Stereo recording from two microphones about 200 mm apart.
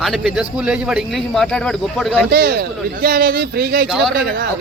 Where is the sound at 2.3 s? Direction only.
50° right (ahead or behind).